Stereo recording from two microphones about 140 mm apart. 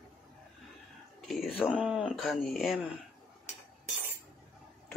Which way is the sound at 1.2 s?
Centre (ahead or behind).